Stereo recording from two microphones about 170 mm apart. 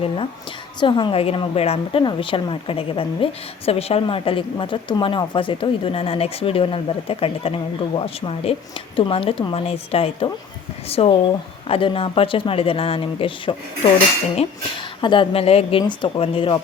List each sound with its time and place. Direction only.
0.8 s speech: 30° left (ahead or behind)